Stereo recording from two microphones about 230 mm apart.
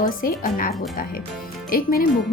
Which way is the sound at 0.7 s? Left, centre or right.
Centre.